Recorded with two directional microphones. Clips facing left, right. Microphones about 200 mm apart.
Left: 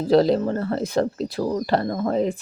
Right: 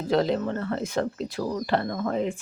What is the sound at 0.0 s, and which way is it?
Speech, 35° left (ahead or behind).